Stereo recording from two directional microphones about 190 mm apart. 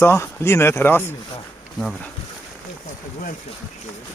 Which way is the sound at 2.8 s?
45° left (ahead or behind).